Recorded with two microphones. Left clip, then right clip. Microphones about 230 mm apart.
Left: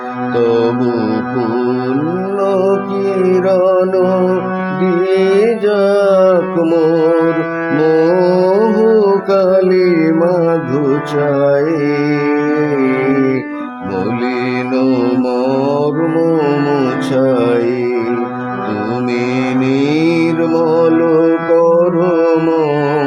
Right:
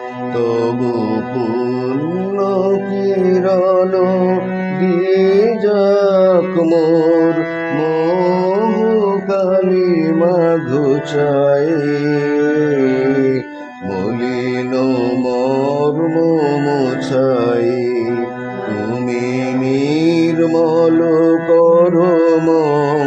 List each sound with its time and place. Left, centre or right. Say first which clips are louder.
2.4 s music: left 2 dB; centre
8.0 s music: left 3 dB; left
8.4 s music: left 4 dB; left; by 11.6 s centre
15.8 s music: left 1 dB; centre
19.7 s music: even; centre
22.3 s mantra: even; centre